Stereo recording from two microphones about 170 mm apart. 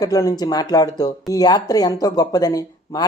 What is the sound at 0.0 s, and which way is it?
Speech, 20° left (ahead or behind).